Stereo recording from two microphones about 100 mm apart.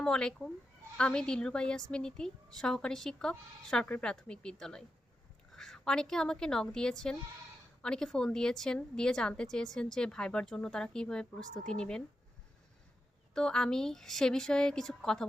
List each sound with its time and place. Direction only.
0.0 s a woman's voice: 5° left (ahead or behind)
13.3 s a woman's voice: 5° left (ahead or behind)